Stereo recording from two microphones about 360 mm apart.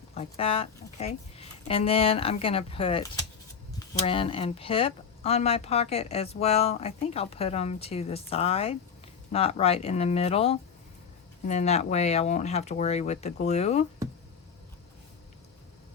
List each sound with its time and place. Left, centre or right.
0.1 s speech: centre